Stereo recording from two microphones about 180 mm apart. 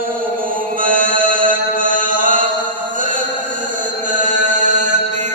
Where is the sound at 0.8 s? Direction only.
50° right (ahead or behind).